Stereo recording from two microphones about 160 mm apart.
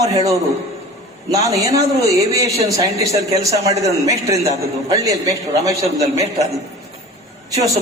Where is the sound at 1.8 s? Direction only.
20° right (ahead or behind).